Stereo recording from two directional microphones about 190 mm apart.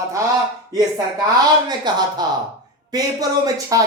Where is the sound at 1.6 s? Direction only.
20° right (ahead or behind).